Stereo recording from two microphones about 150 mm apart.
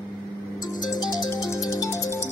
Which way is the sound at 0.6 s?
25° left (ahead or behind).